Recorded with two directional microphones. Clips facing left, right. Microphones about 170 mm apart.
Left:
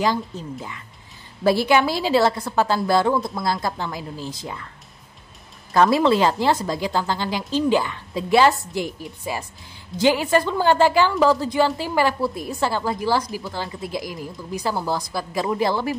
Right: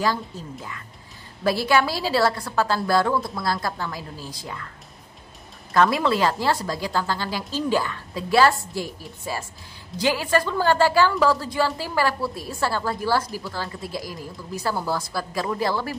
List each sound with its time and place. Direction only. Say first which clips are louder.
0.0 s a woman's voice: left 3 dB; 20° left (ahead or behind)
5.7 s a woman's voice: left 3 dB; 25° left (ahead or behind)
9.9 s a woman's voice: left 4 dB; 25° left (ahead or behind)